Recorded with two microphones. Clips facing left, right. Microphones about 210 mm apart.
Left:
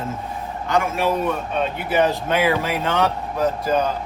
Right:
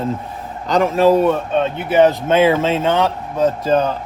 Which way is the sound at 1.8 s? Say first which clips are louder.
Right 7 dB; 25° right (ahead or behind).